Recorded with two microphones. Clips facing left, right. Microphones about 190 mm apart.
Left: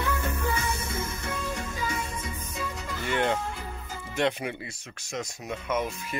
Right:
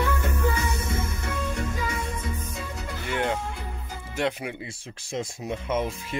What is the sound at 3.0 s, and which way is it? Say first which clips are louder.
Music: left 1 dB; 5° right (ahead or behind).